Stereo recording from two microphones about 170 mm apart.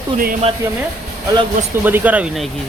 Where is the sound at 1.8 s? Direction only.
10° right (ahead or behind).